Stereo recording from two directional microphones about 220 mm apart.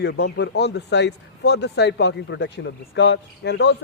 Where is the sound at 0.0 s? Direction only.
50° left (ahead or behind).